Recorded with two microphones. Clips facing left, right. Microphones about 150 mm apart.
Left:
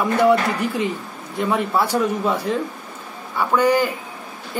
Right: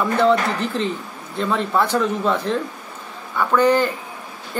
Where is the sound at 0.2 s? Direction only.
10° left (ahead or behind).